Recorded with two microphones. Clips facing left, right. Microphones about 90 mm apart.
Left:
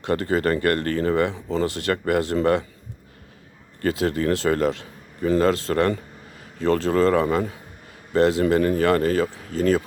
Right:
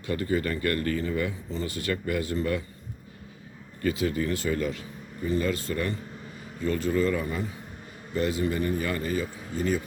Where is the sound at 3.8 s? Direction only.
75° left (ahead or behind).